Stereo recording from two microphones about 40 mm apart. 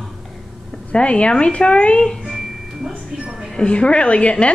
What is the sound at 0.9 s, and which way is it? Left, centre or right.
A woman's voice, left.